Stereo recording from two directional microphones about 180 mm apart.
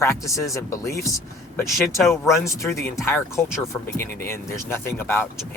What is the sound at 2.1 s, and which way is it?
Speech, 15° left (ahead or behind).